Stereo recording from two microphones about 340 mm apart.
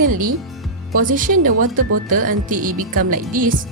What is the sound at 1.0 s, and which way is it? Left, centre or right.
Speech, right.